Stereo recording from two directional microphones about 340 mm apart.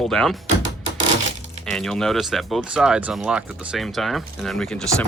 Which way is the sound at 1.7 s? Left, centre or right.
Centre.